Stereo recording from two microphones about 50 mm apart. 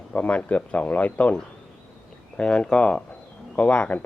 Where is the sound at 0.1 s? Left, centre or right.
Left.